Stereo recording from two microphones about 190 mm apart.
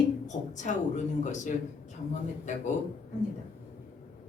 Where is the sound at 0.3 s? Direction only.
40° left (ahead or behind).